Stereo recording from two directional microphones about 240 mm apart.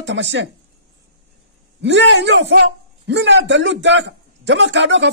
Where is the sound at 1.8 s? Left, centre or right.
Right.